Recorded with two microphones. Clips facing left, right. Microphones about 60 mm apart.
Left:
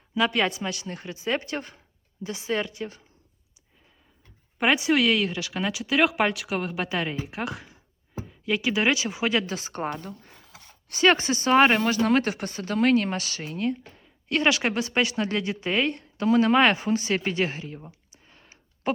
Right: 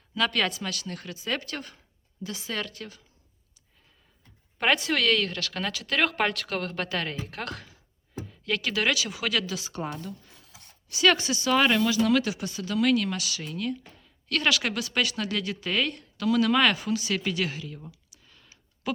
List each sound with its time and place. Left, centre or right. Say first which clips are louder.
0.1 s speech: left 3 dB; centre
4.5 s speech: left 3 dB; centre; by 10.5 s left
10.5 s a sound: left 4 dB; left
10.9 s speech: left 2 dB; left